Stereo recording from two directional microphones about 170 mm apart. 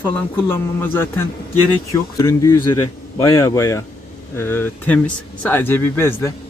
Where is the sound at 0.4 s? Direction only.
15° left (ahead or behind).